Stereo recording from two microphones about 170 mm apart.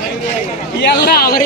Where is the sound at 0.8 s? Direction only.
75° left (ahead or behind); by 1.4 s 60° left (ahead or behind).